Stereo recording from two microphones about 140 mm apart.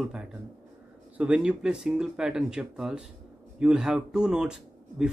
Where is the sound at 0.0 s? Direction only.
5° right (ahead or behind).